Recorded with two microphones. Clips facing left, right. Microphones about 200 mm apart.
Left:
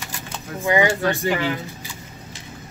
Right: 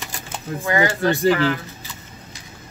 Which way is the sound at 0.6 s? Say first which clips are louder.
Left 1 dB; 15° left (ahead or behind).